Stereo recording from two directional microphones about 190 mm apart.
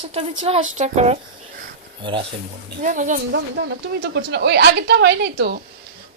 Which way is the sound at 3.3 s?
65° right (ahead or behind).